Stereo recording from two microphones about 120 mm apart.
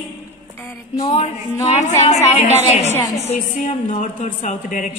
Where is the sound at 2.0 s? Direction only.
70° left (ahead or behind); by 4.9 s 90° left.